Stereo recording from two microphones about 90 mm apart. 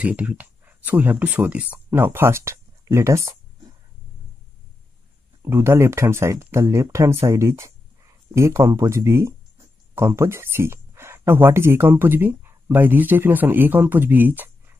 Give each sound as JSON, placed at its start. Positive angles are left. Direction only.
{"t": 0.0, "sound": "speech", "side_deg": -15}
{"t": 5.4, "sound": "speech", "side_deg": -30}